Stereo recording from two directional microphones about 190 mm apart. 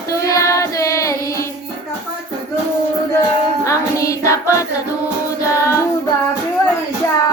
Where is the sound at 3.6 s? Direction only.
15° left (ahead or behind).